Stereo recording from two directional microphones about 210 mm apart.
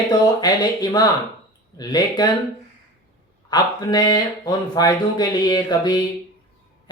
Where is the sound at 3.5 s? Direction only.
20° left (ahead or behind).